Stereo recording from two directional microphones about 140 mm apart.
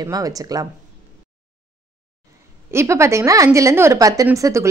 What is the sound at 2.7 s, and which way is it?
A woman's voice, 20° right (ahead or behind).